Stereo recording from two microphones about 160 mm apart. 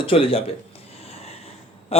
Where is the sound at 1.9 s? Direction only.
40° left (ahead or behind).